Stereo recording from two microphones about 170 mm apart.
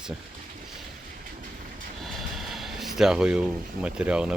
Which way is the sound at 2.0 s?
Centre (ahead or behind).